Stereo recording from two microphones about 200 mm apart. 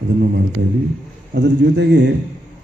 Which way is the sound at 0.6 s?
60° right (ahead or behind).